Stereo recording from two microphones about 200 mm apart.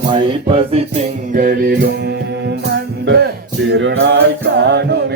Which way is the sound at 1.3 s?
45° right (ahead or behind).